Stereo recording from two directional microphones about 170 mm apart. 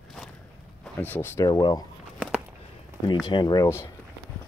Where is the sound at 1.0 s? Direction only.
10° left (ahead or behind).